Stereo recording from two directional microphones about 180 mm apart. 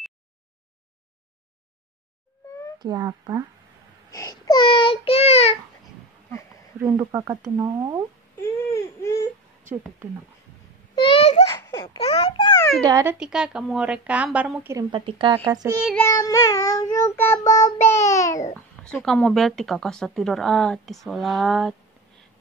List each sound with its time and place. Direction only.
2.8 s speech: 20° right (ahead or behind)
4.1 s child singing: 20° left (ahead or behind); by 5.6 s 35° left (ahead or behind)
7.0 s speech: 20° right (ahead or behind)
8.4 s a sound: 15° left (ahead or behind)
11.0 s a sound: 30° left (ahead or behind)
11.4 s a sound: 15° left (ahead or behind)
12.0 s babbling: 35° left (ahead or behind)
12.8 s speech: 20° right (ahead or behind)
13.2 s a woman's voice: 5° right (ahead or behind)
14.9 s speech: 30° right (ahead or behind)
16.0 s child singing: 15° left (ahead or behind)
17.9 s babbling: 15° left (ahead or behind)
18.9 s speech: 5° left (ahead or behind)